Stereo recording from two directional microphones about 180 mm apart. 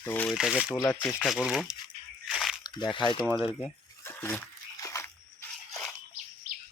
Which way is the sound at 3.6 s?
10° left (ahead or behind).